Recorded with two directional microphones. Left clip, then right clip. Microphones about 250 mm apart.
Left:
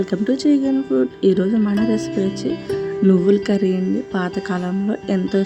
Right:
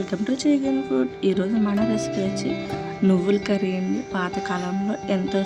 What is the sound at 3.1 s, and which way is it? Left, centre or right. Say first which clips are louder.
Speech: left 5 dB; centre.